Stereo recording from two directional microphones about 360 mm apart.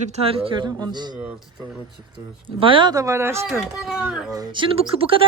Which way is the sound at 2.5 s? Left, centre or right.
Centre.